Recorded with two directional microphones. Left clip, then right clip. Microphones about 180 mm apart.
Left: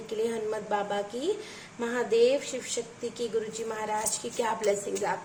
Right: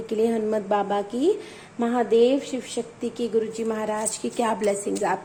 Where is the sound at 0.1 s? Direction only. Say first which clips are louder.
Right 7 dB; 35° right (ahead or behind).